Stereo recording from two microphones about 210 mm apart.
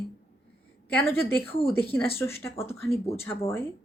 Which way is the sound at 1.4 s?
25° left (ahead or behind).